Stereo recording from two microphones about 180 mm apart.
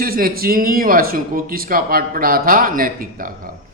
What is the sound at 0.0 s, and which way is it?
A man's voice, 55° right (ahead or behind).